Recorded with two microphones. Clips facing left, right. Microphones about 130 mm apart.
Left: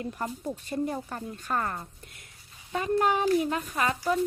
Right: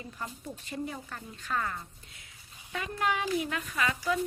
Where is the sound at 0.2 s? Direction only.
45° left (ahead or behind).